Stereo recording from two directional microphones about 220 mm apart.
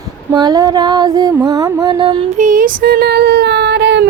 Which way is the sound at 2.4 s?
40° right (ahead or behind).